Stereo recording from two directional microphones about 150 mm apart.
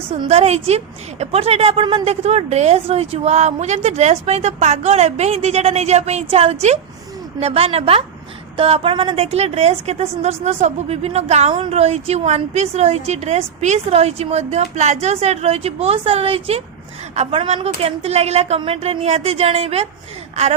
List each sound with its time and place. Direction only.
0.1 s a woman's voice: 45° right (ahead or behind)